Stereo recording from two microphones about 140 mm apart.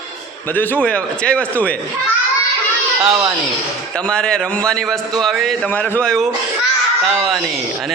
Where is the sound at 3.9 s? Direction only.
5° left (ahead or behind).